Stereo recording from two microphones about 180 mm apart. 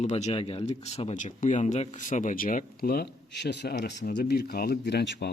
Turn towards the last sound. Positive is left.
turn(degrees=70)  # may be behind; listen again after turning